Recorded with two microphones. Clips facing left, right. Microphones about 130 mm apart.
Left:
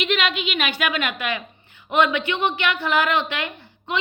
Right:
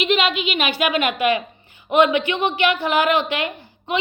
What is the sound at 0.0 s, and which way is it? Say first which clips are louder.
Speech: right 4 dB; 30° right (ahead or behind).